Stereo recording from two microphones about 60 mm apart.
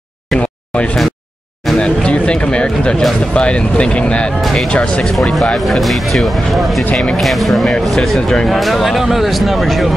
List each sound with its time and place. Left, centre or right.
0.4 s a sound: left
3.3 s speech: centre
4.4 s speech: centre